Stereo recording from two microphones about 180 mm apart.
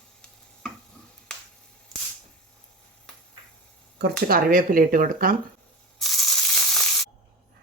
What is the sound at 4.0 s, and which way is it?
Speech, 55° right (ahead or behind).